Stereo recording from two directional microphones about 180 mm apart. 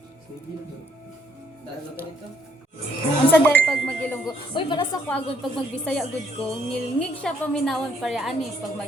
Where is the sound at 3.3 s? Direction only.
10° left (ahead or behind).